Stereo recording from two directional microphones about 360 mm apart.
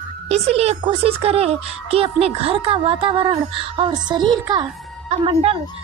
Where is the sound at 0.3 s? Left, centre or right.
Centre.